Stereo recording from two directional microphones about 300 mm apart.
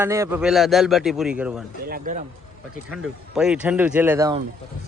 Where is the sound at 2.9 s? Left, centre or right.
Centre.